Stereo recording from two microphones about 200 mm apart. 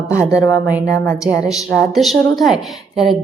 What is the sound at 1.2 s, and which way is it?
Speech, 5° right (ahead or behind).